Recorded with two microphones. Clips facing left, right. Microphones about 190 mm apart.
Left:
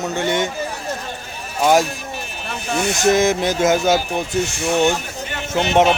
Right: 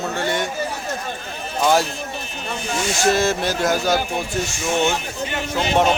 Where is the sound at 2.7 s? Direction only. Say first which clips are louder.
Left 4 dB; 60° left (ahead or behind).